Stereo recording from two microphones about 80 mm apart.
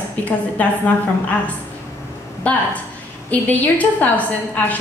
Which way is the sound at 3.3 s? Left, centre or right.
Centre.